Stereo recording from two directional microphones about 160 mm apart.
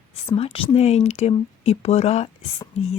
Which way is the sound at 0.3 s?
35° left (ahead or behind).